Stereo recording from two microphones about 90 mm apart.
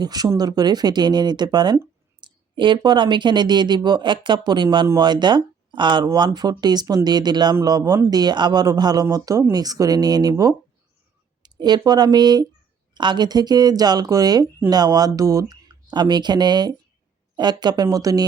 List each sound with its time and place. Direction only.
0.0 s speech: 50° right (ahead or behind)